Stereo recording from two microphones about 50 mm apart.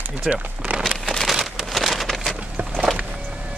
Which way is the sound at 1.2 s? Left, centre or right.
Centre.